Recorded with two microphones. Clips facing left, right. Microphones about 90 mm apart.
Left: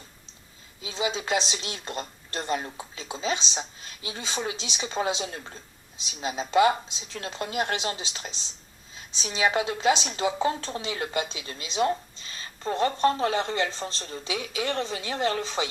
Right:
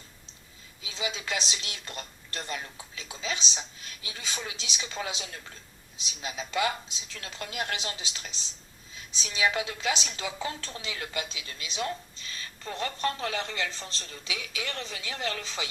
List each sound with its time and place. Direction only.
0.8 s speech: 35° left (ahead or behind)